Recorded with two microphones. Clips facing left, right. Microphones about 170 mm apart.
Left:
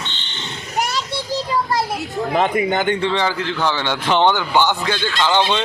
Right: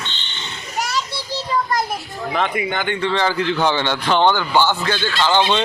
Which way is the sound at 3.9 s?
20° left (ahead or behind).